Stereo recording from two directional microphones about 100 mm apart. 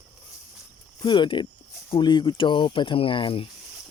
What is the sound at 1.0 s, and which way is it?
Speech, 50° left (ahead or behind).